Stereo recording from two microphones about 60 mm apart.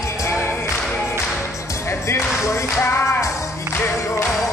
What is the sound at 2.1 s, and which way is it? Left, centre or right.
Music, left.